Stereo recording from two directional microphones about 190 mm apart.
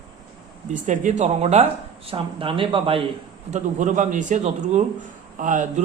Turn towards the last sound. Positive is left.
turn(degrees=-40)  # may be behind; listen again after turning